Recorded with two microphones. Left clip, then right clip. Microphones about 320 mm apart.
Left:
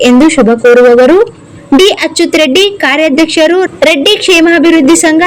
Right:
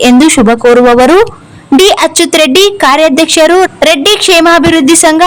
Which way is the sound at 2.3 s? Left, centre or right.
Right.